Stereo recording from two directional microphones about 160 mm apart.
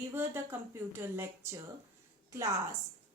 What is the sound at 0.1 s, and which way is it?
A woman's voice, 15° right (ahead or behind).